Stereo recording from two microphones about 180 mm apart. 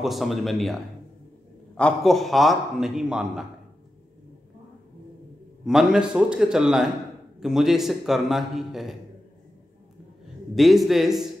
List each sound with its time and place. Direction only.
0.0 s a man's voice: centre (ahead or behind)
1.8 s a man's voice: 5° left (ahead or behind)
5.7 s a man's voice: 5° right (ahead or behind)
10.5 s a man's voice: centre (ahead or behind)